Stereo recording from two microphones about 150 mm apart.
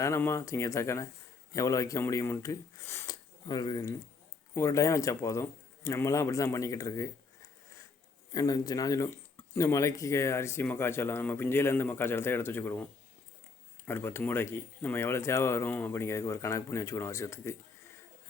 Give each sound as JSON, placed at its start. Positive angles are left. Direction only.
{"t": 0.0, "sound": "speech", "side_deg": 15}
{"t": 8.3, "sound": "speech", "side_deg": 25}
{"t": 13.8, "sound": "speech", "side_deg": 15}